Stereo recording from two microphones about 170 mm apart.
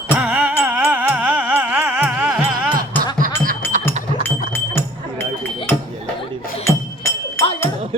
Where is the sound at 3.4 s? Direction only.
50° right (ahead or behind).